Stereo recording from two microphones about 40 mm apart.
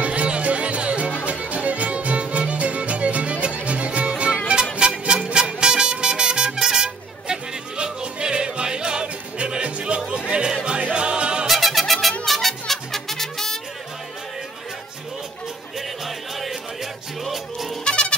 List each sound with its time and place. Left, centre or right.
0.0 s music: right
11.4 s music: centre
16.3 s music: centre
17.8 s music: left